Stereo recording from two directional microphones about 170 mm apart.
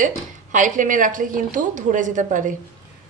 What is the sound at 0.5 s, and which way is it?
A woman's voice, 50° right (ahead or behind).